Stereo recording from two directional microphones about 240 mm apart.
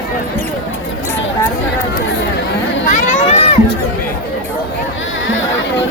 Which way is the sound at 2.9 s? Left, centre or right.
Left.